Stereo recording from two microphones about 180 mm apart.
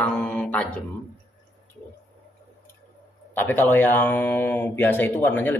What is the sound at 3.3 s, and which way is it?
Speech, 10° left (ahead or behind).